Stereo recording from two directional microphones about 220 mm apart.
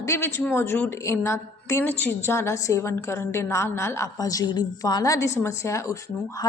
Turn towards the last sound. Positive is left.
turn(degrees=15)  # may be behind; listen again after turning